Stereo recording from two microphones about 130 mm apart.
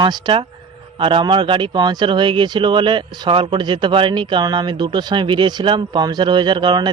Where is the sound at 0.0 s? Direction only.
35° right (ahead or behind).